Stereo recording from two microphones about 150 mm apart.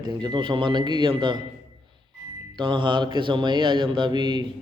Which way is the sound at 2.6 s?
30° right (ahead or behind).